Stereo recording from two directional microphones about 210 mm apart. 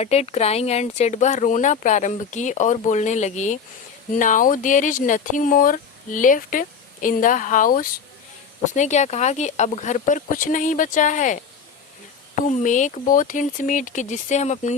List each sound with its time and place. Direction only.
0.0 s speech: 30° left (ahead or behind)